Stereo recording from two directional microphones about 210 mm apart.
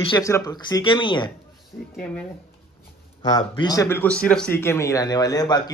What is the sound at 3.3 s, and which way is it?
Speech, 15° left (ahead or behind).